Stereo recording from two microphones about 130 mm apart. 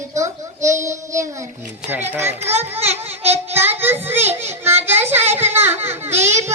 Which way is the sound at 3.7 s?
15° right (ahead or behind).